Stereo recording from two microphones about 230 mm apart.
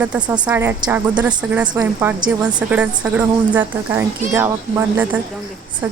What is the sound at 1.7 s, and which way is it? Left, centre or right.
Speech, centre.